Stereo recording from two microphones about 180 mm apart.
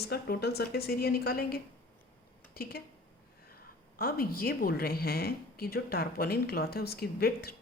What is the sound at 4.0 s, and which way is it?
Speech, 55° left (ahead or behind).